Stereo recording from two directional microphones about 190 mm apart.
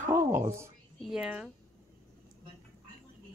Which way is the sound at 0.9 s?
Centre (ahead or behind).